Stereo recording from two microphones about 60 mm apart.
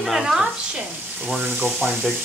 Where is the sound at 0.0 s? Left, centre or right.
Centre.